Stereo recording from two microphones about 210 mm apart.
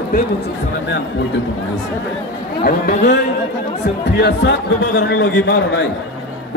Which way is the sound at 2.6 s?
50° left (ahead or behind).